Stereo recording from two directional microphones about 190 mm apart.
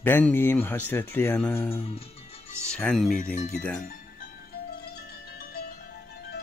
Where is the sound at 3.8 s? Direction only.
50° left (ahead or behind).